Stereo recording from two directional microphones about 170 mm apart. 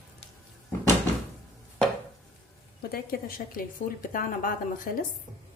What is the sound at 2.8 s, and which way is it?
A woman's voice, 65° left (ahead or behind).